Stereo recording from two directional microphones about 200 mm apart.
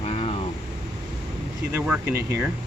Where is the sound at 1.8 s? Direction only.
5° right (ahead or behind).